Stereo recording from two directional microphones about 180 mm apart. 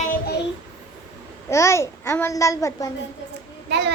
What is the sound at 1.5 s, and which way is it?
Child singing, 15° left (ahead or behind).